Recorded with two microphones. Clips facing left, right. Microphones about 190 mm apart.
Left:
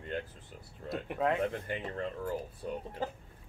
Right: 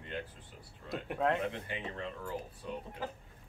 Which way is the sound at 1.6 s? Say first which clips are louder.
Left 4 dB; 45° left (ahead or behind).